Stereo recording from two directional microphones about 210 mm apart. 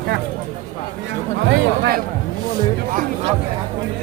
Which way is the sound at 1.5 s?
50° right (ahead or behind).